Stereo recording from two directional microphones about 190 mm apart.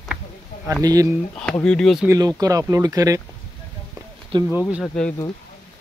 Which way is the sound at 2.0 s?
20° right (ahead or behind).